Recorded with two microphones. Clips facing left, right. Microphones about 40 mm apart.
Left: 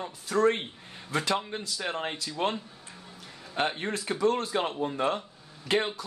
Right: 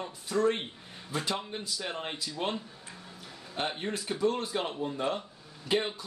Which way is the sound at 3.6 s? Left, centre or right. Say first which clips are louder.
Left 1 dB; left.